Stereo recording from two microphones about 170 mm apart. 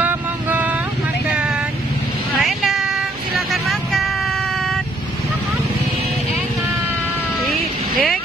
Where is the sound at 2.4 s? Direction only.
Centre (ahead or behind).